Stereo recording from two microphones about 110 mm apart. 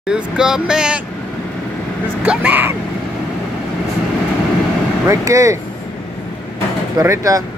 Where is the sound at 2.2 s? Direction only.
15° right (ahead or behind).